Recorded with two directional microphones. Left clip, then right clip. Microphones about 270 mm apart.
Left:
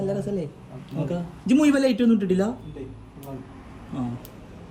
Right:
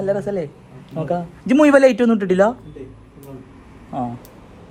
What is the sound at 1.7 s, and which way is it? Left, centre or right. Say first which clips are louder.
Speech: right 10 dB; right.